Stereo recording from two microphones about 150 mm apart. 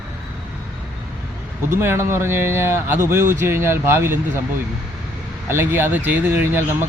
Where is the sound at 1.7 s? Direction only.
15° right (ahead or behind).